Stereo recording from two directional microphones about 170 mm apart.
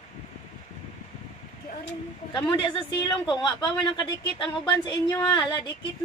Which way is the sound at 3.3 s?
25° left (ahead or behind).